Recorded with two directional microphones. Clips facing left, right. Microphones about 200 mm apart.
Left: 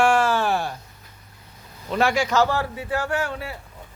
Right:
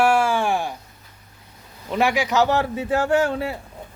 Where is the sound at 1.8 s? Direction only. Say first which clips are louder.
Even; 15° right (ahead or behind).